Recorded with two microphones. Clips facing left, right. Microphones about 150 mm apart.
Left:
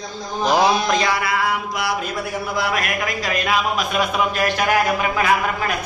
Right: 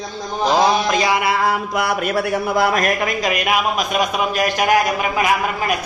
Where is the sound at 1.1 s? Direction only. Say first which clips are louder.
Right 4 dB; 25° right (ahead or behind).